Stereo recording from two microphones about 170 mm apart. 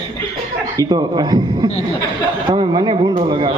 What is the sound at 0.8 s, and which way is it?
A man's voice, 25° right (ahead or behind).